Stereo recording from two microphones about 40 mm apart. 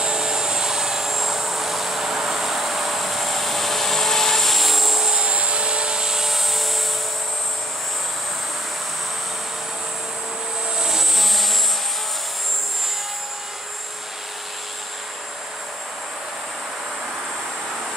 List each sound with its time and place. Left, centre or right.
0.0 s vehicle: centre
5.1 s helicopter: right; by 6.8 s centre
10.8 s vehicle: centre